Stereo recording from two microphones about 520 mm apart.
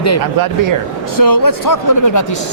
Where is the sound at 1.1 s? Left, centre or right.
Left.